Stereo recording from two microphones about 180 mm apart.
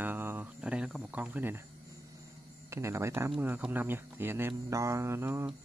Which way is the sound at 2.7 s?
15° right (ahead or behind).